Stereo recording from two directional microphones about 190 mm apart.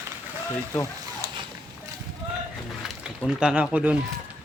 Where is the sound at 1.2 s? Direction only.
15° right (ahead or behind).